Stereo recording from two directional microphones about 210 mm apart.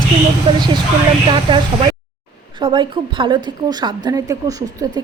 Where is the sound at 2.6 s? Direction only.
25° right (ahead or behind).